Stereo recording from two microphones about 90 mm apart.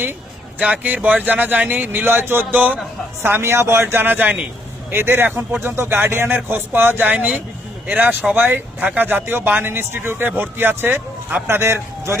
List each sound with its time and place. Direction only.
0.6 s a man's voice: 15° right (ahead or behind)
11.4 s speech: 30° right (ahead or behind)